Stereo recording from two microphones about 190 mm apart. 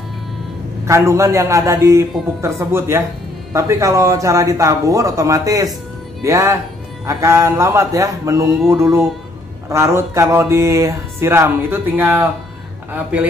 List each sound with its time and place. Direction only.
0.8 s speech: 15° right (ahead or behind)